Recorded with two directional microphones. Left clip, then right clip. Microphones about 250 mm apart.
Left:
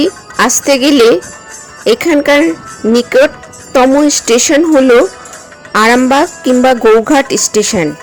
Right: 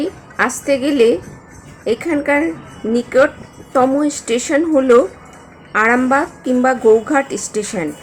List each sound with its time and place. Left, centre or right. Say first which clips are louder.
0.0 s speech: left 7 dB; left
5.7 s speech: left 6 dB; left